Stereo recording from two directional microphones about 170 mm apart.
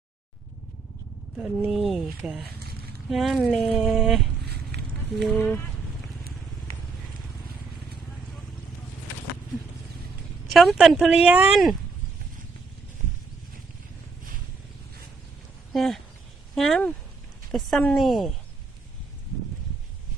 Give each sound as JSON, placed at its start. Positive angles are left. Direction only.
{"t": 1.4, "sound": "speech", "side_deg": -5}
{"t": 4.4, "sound": "a sound", "side_deg": -75}
{"t": 5.4, "sound": "speech", "side_deg": 10}
{"t": 10.5, "sound": "speech", "side_deg": 0}
{"t": 15.7, "sound": "speech", "side_deg": 0}